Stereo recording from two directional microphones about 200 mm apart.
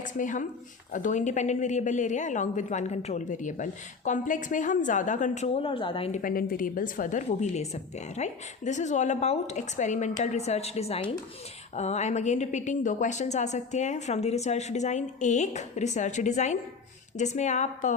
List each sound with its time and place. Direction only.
0.1 s a woman's voice: 40° left (ahead or behind)
6.2 s a woman's voice: 45° left (ahead or behind)